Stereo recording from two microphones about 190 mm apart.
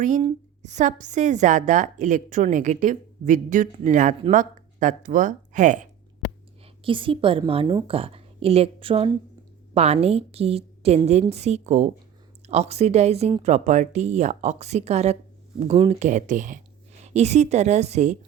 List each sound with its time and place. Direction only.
0.2 s a woman's voice: 35° right (ahead or behind)
6.8 s a woman's voice: 25° right (ahead or behind)